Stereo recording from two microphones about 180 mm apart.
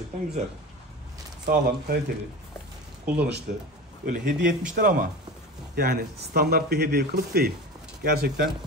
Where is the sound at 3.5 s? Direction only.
50° right (ahead or behind).